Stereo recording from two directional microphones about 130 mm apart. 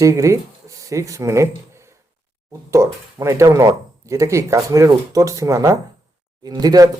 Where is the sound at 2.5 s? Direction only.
25° right (ahead or behind).